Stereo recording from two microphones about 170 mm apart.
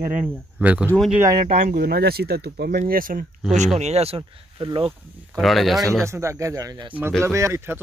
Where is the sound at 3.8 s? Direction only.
40° right (ahead or behind).